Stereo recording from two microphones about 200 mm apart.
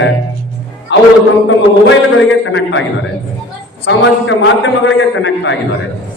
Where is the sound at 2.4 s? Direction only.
70° left (ahead or behind).